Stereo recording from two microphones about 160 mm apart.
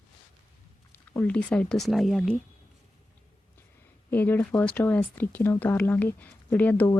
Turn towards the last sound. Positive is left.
turn(degrees=10)  # may be behind; listen again after turning